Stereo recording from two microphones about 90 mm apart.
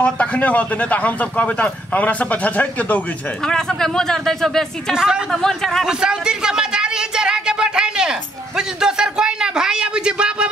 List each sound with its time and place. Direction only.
0.0 s speech: 15° left (ahead or behind)
3.4 s speech: 5° left (ahead or behind)
4.9 s a woman's voice: 5° right (ahead or behind)
5.3 s speech: 5° left (ahead or behind)
5.9 s a sound: 10° right (ahead or behind)